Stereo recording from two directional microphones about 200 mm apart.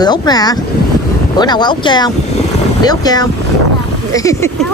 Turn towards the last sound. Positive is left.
turn(degrees=15)  # may be behind; listen again after turning